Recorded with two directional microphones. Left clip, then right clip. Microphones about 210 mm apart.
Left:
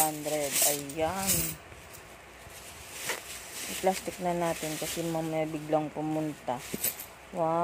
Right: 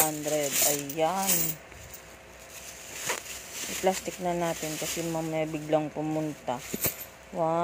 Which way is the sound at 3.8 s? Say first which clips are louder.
Right 1 dB; centre (ahead or behind).